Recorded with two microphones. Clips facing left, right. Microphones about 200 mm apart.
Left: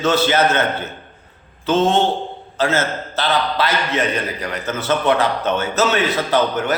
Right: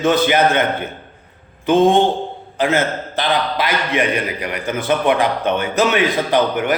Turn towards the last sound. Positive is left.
turn(degrees=-15)  # may be behind; listen again after turning